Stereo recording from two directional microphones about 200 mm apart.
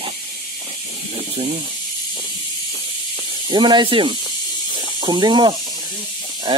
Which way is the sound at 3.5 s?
25° right (ahead or behind).